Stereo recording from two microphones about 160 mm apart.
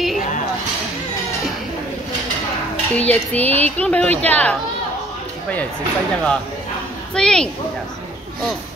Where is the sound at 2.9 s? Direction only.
10° left (ahead or behind).